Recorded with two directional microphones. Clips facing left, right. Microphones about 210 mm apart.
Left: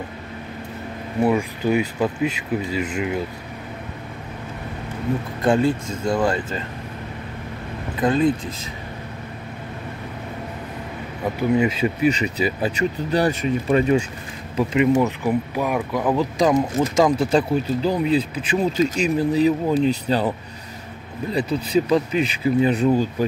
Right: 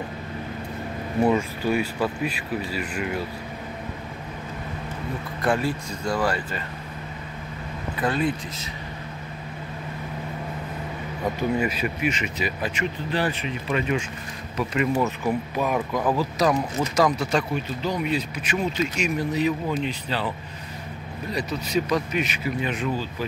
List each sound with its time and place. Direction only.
1.6 s speech: 20° left (ahead or behind)
5.4 s speech: 25° left (ahead or behind)
8.0 s speech: 20° left (ahead or behind)
11.5 s speech: 20° left (ahead or behind); by 14.0 s 40° left (ahead or behind)
14.6 s speech: 20° left (ahead or behind)
16.3 s speech: 25° left (ahead or behind); by 20.3 s 45° left (ahead or behind)
21.3 s speech: 30° left (ahead or behind)